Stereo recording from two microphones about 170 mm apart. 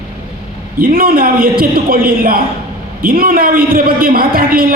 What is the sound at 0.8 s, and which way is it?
A woman's voice, 55° right (ahead or behind).